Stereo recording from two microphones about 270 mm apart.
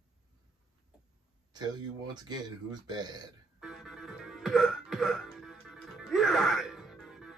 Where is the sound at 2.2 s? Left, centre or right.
Centre.